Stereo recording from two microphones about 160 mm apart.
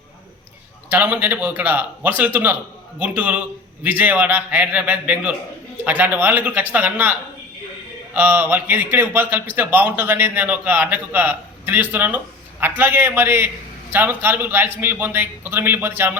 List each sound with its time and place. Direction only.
0.9 s a man's voice: 10° right (ahead or behind)